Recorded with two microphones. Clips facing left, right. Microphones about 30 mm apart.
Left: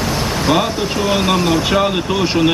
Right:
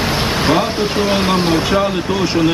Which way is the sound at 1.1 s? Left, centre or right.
Right.